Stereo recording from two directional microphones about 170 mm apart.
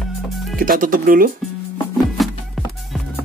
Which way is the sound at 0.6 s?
55° right (ahead or behind).